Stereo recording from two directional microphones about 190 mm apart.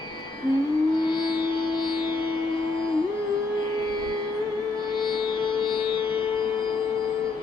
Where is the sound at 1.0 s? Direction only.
25° left (ahead or behind).